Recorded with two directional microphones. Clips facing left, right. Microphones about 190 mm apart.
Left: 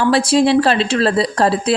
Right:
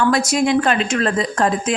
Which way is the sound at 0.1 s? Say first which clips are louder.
Left 4 dB; 30° left (ahead or behind).